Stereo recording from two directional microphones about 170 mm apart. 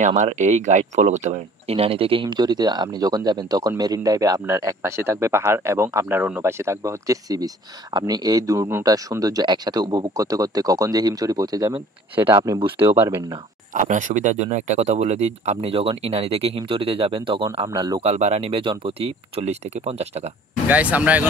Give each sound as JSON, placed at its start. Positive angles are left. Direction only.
{"t": 0.0, "sound": "speech", "side_deg": -45}
{"t": 13.7, "sound": "speech", "side_deg": -50}
{"t": 18.0, "sound": "speech", "side_deg": -40}
{"t": 20.6, "sound": "speech", "side_deg": -10}